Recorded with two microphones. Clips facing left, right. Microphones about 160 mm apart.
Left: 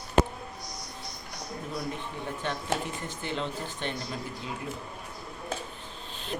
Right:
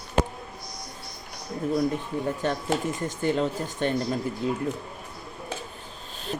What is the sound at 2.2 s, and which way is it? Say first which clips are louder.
Speech: right 4 dB; 40° right (ahead or behind).